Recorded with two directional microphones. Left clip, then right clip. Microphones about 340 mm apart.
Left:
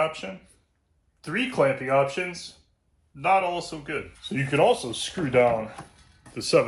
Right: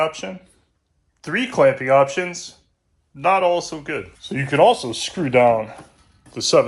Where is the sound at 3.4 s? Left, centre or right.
Centre.